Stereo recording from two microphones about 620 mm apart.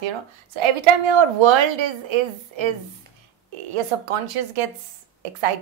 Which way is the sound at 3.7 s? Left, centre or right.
Right.